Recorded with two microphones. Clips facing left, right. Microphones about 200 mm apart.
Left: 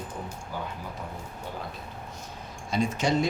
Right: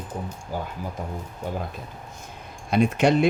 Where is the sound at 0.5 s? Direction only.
40° right (ahead or behind).